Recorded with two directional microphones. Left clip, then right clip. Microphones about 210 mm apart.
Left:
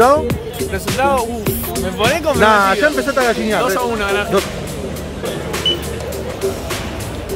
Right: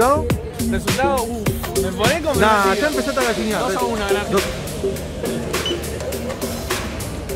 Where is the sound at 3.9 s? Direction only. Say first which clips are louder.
Left 3 dB; 15° right (ahead or behind).